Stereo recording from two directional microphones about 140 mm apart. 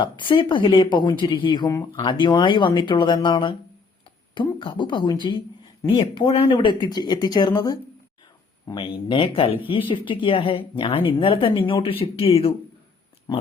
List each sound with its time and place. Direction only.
0.0 s speech: 35° left (ahead or behind)
4.6 s speech: 35° left (ahead or behind)